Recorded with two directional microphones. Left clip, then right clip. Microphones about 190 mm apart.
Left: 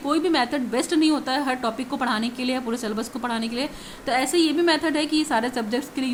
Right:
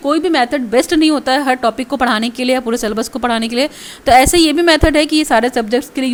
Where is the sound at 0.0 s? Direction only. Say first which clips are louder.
Right 8 dB; 35° right (ahead or behind).